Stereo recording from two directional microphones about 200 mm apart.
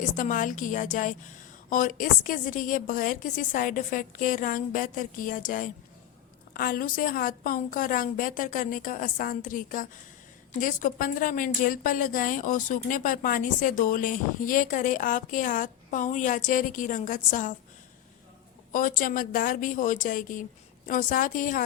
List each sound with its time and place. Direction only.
0.2 s a woman's voice: 40° left (ahead or behind)
18.7 s a woman's voice: 45° left (ahead or behind)